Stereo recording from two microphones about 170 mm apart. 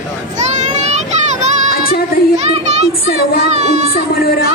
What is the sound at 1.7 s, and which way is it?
Child singing, 60° left (ahead or behind).